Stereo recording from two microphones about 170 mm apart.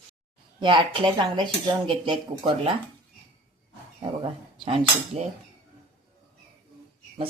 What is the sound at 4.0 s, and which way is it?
Speech, 30° right (ahead or behind).